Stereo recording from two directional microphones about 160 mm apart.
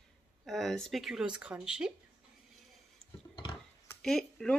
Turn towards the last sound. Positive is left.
turn(degrees=5)  # may be behind; listen again after turning